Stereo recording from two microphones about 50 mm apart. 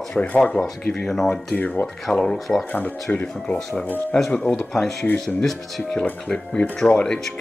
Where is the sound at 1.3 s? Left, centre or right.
Left.